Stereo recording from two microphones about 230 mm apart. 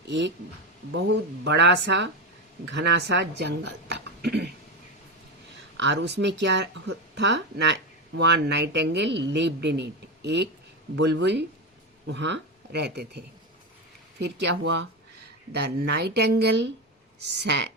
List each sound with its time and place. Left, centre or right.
0.1 s speech: right
5.7 s speech: right